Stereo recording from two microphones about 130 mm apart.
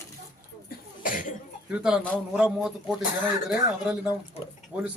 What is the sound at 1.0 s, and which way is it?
Cough, 90° left.